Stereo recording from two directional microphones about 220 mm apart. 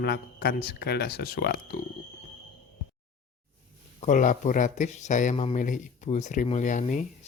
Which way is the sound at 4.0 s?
35° left (ahead or behind).